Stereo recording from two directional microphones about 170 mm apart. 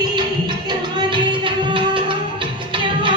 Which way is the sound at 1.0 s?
30° right (ahead or behind).